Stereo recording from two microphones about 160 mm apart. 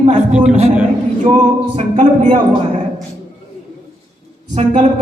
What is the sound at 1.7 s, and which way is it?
Speech, 40° right (ahead or behind).